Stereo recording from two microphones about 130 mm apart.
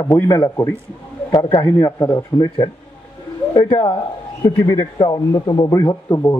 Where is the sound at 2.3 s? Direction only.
35° left (ahead or behind).